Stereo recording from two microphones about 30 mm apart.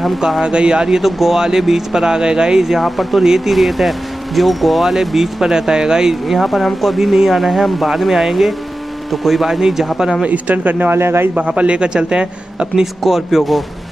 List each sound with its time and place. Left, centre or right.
0.4 s speech: right
1.0 s speech: centre
2.0 s speech: right
2.8 s speech: centre; by 6.1 s right
6.2 s speech: centre
7.0 s speech: centre
9.5 s speech: centre
10.2 s speech: right
11.3 s a man's voice: right
13.0 s speech: centre